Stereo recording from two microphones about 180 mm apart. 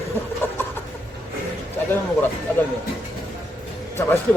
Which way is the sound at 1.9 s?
10° left (ahead or behind).